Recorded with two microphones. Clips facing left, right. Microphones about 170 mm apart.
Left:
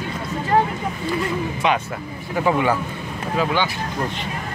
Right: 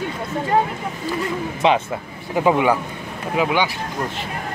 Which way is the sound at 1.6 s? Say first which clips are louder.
Right 6 dB; 25° right (ahead or behind).